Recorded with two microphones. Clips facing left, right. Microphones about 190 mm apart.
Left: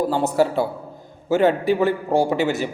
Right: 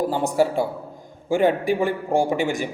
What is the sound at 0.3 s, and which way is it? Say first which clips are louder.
A man's voice: left 1 dB; 10° right (ahead or behind).